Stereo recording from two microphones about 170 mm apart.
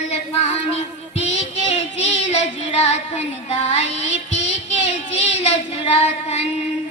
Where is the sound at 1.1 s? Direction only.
40° left (ahead or behind).